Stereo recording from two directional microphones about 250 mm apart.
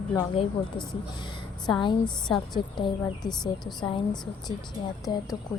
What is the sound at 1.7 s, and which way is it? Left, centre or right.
A woman's voice, centre.